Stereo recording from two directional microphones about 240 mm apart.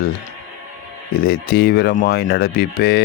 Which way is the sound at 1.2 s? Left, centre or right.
Left.